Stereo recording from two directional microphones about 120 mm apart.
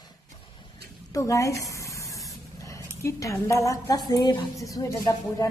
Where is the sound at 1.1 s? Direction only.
25° left (ahead or behind).